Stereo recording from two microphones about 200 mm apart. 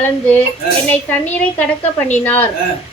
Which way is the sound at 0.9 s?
10° left (ahead or behind).